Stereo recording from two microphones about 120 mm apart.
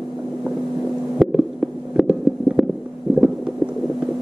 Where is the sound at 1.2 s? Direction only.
Centre (ahead or behind).